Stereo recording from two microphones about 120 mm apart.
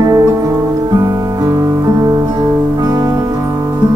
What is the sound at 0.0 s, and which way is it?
Music, 30° right (ahead or behind).